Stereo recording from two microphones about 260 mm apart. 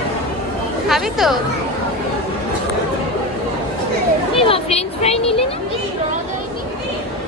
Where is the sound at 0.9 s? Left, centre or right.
Centre.